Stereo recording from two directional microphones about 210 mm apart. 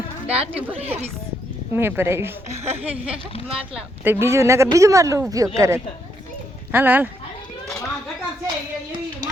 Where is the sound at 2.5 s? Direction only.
30° right (ahead or behind).